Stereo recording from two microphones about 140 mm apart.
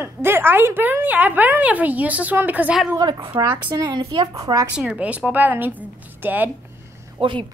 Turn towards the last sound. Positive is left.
turn(degrees=-40)  # may be behind; listen again after turning